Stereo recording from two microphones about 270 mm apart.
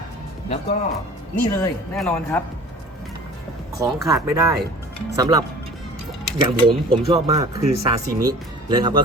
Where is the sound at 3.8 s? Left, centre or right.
Centre.